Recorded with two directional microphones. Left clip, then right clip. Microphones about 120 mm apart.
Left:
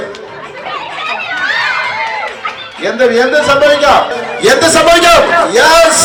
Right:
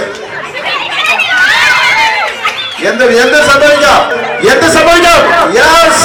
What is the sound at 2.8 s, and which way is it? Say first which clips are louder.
A man's voice: right 2 dB; 10° left (ahead or behind).